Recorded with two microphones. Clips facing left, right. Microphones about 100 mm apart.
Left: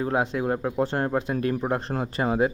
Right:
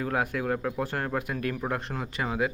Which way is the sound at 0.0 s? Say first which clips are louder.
Left 4 dB; 25° left (ahead or behind).